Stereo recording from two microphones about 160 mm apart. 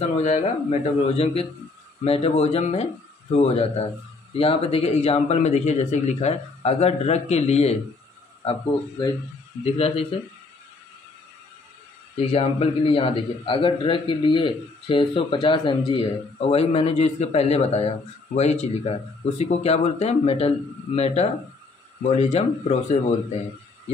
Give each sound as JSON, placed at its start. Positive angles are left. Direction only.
{"t": 0.2, "sound": "a man's voice", "side_deg": 40}
{"t": 9.8, "sound": "a man's voice", "side_deg": 35}
{"t": 12.2, "sound": "a man's voice", "side_deg": 35}